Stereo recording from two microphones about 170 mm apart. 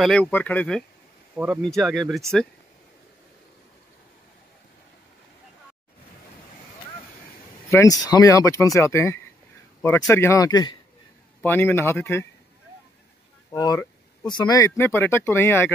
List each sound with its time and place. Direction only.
0.0 s speech: 5° left (ahead or behind)
1.3 s speech: 5° right (ahead or behind)
7.7 s speech: 20° left (ahead or behind)
11.4 s speech: 10° left (ahead or behind)
13.5 s speech: 20° left (ahead or behind)